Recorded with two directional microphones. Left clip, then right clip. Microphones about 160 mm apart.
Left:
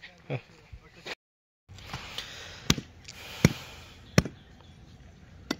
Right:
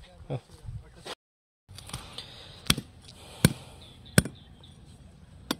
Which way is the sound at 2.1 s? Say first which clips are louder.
Left 4 dB; 5° right (ahead or behind).